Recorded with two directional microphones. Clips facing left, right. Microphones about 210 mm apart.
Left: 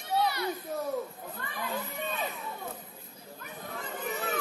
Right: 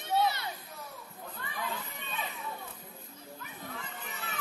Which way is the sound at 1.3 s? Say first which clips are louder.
Left 3 dB; 45° left (ahead or behind).